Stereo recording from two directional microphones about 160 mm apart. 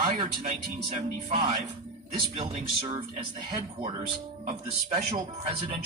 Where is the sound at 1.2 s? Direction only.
40° right (ahead or behind).